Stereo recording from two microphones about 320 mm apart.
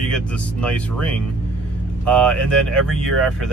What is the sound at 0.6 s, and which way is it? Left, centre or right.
Speech, centre.